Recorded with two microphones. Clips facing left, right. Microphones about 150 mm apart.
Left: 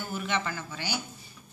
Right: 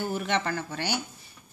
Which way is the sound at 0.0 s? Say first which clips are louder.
Right 4 dB; 60° right (ahead or behind).